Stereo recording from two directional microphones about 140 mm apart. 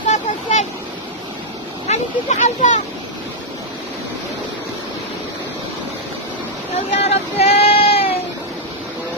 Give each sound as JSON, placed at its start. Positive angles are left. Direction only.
{"t": 0.0, "sound": "vehicle", "side_deg": 60}
{"t": 1.9, "sound": "speech", "side_deg": 55}
{"t": 7.0, "sound": "a sound", "side_deg": 50}